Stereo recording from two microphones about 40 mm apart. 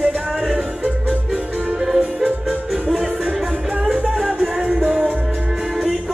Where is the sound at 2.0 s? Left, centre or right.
Centre.